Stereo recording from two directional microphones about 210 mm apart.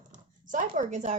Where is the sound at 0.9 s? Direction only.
35° right (ahead or behind).